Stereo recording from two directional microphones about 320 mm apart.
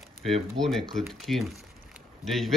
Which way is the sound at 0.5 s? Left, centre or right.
Centre.